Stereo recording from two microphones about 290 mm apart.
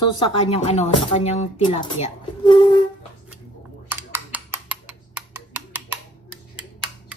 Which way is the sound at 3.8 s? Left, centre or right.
Centre.